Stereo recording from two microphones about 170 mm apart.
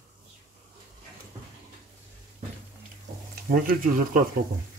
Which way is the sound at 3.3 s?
60° right (ahead or behind).